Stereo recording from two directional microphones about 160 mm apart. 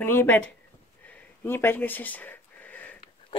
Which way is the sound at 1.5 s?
15° left (ahead or behind).